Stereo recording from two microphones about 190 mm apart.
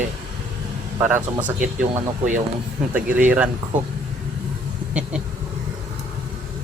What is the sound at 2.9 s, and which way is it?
Speech, 10° right (ahead or behind).